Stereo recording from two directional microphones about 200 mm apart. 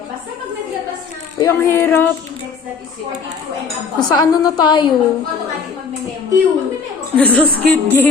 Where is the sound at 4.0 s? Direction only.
20° left (ahead or behind).